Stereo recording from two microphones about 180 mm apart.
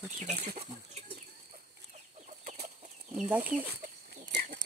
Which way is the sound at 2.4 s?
35° right (ahead or behind).